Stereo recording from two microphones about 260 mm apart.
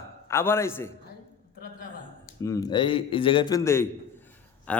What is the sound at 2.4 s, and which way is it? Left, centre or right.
A man's voice, centre.